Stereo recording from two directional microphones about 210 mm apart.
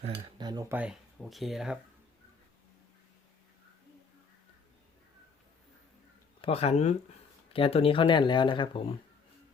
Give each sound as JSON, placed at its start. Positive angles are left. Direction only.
{"t": 0.3, "sound": "speech", "side_deg": -20}
{"t": 6.4, "sound": "speech", "side_deg": 30}